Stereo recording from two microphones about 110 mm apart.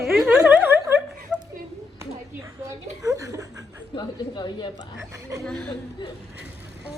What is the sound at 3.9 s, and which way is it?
Speech, 40° left (ahead or behind).